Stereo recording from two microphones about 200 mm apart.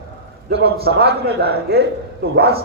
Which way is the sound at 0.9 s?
55° right (ahead or behind).